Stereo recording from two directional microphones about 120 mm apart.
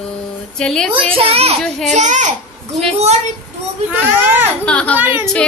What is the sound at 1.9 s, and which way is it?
Speech, 90° right.